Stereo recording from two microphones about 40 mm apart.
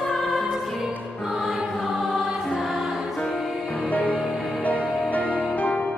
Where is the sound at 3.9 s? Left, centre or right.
Left.